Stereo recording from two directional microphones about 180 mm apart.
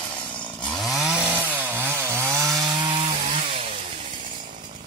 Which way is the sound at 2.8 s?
30° right (ahead or behind).